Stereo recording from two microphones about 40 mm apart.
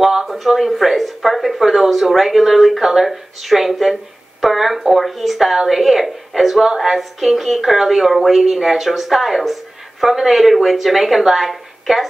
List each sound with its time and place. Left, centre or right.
0.0 s speech: centre
0.3 s a woman's voice: centre